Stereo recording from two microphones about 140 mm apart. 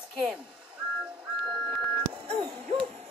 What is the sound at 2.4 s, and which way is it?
Hoot, 35° right (ahead or behind).